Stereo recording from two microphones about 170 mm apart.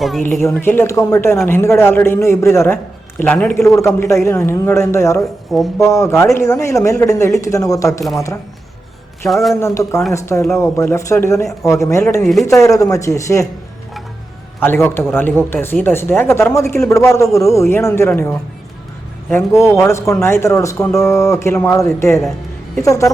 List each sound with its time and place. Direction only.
0.5 s speech: 10° left (ahead or behind)
9.2 s a man's voice: centre (ahead or behind)
9.6 s speech: 15° left (ahead or behind)
12.2 s a man's voice: centre (ahead or behind)
12.5 s speech: 20° left (ahead or behind)
14.6 s speech: 10° left (ahead or behind)